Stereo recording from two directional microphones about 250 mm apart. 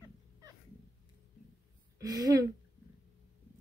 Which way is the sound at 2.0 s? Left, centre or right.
Centre.